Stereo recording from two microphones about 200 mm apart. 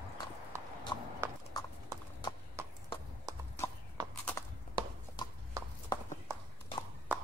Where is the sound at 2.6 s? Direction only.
15° right (ahead or behind).